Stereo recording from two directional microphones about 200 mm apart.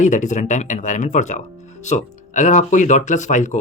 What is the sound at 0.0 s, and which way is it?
Speech, 40° left (ahead or behind).